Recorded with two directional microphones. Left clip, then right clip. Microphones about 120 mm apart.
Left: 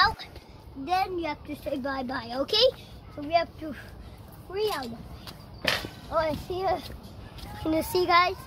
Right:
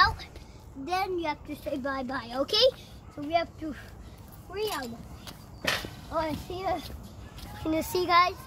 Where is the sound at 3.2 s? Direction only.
10° left (ahead or behind).